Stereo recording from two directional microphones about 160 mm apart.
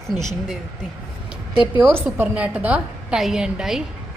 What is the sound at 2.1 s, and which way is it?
A woman's voice, 10° right (ahead or behind).